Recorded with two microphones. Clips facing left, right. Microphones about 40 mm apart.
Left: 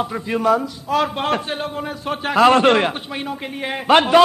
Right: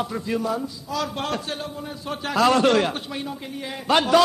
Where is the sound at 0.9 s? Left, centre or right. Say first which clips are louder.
Left 8 dB; left.